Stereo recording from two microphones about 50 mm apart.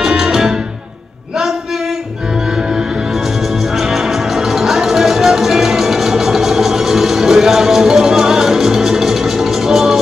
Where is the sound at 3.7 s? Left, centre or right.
Centre.